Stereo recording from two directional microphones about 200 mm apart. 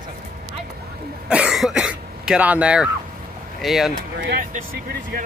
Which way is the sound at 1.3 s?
5° right (ahead or behind).